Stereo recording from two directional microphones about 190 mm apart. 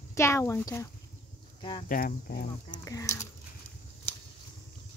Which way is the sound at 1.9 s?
50° left (ahead or behind).